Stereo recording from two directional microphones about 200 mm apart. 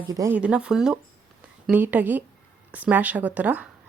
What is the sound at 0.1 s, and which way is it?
Speech, 15° right (ahead or behind).